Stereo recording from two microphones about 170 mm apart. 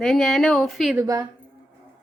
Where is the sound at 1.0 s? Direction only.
20° right (ahead or behind).